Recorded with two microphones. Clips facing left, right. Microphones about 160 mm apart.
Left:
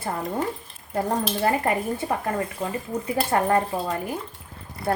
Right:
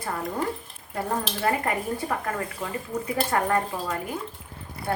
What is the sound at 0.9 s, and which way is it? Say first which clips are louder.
A woman's voice: left 4 dB; 30° left (ahead or behind).